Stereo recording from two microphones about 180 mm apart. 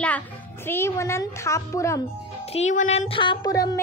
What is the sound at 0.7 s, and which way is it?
A woman's voice, 15° left (ahead or behind).